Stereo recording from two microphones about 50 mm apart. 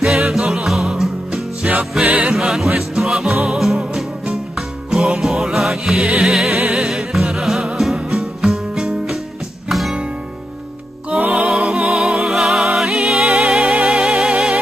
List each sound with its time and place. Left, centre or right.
0.0 s music: centre
11.1 s music: right
11.3 s music: centre
14.3 s music: centre